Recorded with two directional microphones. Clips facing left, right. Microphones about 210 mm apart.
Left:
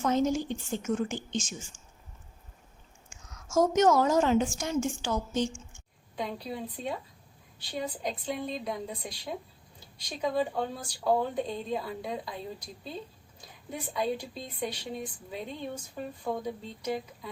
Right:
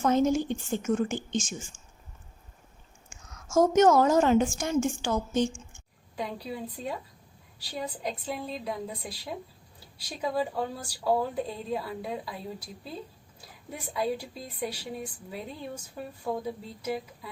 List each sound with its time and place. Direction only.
0.0 s a woman's voice: 55° right (ahead or behind)
3.1 s a woman's voice: 50° right (ahead or behind)
6.1 s a woman's voice: 10° right (ahead or behind)
13.9 s a woman's voice: 5° right (ahead or behind)